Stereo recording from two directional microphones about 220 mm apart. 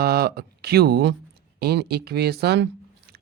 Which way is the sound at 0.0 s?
45° right (ahead or behind).